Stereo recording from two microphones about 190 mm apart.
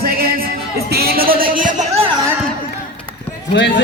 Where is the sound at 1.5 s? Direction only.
45° right (ahead or behind).